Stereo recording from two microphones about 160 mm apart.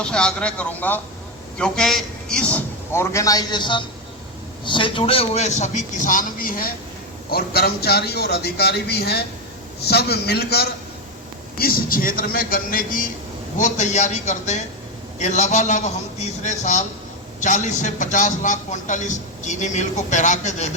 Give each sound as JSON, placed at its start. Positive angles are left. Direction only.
{"t": 0.0, "sound": "a man's voice", "side_deg": 5}
{"t": 7.3, "sound": "a man's voice", "side_deg": 75}
{"t": 11.5, "sound": "a man's voice", "side_deg": 65}
{"t": 13.6, "sound": "a man's voice", "side_deg": 50}